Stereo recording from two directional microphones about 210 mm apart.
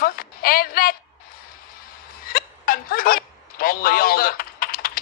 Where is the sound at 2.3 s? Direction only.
45° left (ahead or behind).